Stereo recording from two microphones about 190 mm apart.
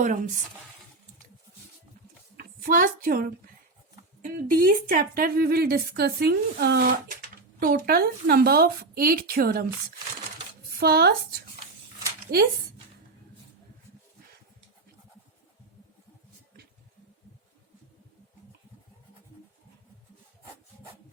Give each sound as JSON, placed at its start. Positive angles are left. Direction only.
{"t": 0.0, "sound": "speech", "side_deg": -45}
{"t": 2.4, "sound": "a woman's voice", "side_deg": -50}
{"t": 10.8, "sound": "speech", "side_deg": -55}